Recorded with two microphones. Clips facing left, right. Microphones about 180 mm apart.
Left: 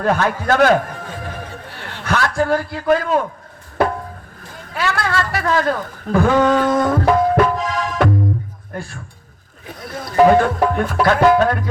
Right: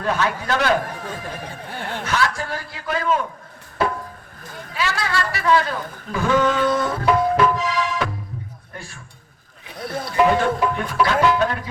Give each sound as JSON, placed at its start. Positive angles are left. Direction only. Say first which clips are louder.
{"t": 0.0, "sound": "speech", "louder": "left 4 dB", "side_deg": 50}
{"t": 1.7, "sound": "chuckle", "louder": "right 5 dB", "side_deg": -50}
{"t": 2.0, "sound": "a man's voice", "louder": "left 7 dB", "side_deg": 50}
{"t": 4.7, "sound": "speech", "louder": "left 4 dB", "side_deg": 55}
{"t": 6.4, "sound": "music", "louder": "left 4 dB", "side_deg": 45}
{"t": 9.6, "sound": "speech", "louder": "right 1 dB", "side_deg": 45}